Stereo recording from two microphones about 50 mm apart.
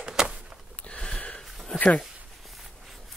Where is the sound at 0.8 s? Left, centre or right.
Left.